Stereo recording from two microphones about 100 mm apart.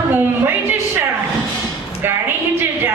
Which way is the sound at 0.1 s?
20° right (ahead or behind).